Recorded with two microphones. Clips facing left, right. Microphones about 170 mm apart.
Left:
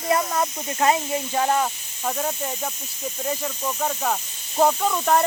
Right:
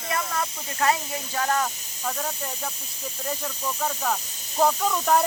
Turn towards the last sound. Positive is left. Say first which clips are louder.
# left 2 dB
turn(degrees=0)  # may be behind; listen again after turning